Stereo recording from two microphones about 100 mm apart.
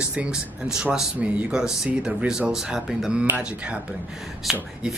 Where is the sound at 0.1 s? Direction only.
10° right (ahead or behind).